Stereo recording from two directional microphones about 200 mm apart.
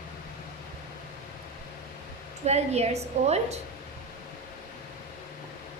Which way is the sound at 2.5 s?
30° right (ahead or behind).